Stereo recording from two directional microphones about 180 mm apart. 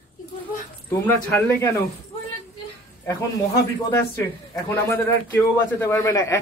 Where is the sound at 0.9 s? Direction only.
10° left (ahead or behind).